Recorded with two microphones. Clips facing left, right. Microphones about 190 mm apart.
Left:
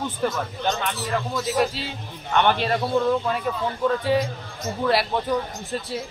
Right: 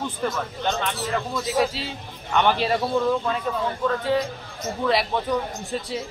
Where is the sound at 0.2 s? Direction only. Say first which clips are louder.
Left 2 dB; 5° left (ahead or behind).